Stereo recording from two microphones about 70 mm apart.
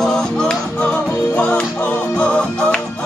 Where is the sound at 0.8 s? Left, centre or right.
Left.